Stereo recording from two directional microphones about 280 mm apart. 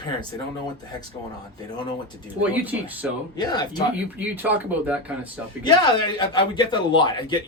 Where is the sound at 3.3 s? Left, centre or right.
Centre.